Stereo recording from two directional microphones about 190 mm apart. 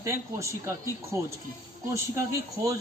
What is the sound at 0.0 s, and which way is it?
Speech, 15° right (ahead or behind).